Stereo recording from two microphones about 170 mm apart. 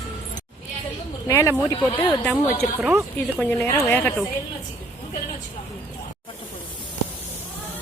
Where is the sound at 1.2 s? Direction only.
15° left (ahead or behind).